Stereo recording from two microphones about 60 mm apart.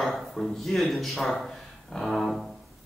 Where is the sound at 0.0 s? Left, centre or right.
Centre.